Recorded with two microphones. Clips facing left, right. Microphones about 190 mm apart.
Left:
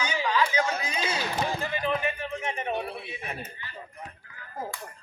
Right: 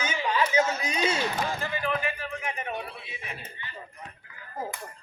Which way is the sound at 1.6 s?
20° left (ahead or behind).